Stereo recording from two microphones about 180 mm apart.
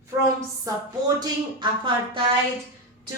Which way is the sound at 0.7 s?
20° right (ahead or behind).